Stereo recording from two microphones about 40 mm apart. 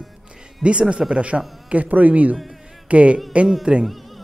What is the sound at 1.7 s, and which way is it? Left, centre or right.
A man's voice, right.